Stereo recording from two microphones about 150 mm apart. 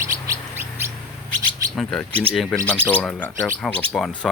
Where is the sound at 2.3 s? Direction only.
5° left (ahead or behind).